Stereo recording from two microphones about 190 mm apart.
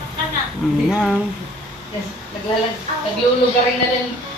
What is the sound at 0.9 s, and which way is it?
Speech, centre (ahead or behind).